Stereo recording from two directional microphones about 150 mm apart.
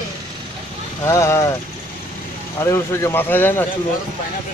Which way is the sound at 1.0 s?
20° left (ahead or behind).